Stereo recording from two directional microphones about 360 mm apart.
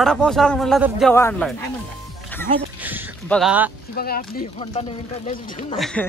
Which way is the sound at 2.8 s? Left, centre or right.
Centre.